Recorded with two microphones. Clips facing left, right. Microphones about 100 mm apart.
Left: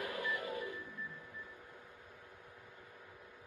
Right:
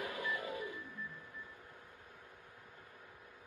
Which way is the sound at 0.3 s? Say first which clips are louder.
Left 1 dB; 15° right (ahead or behind).